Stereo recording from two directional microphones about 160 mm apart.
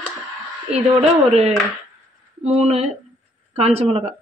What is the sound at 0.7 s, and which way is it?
A woman's voice, 45° right (ahead or behind).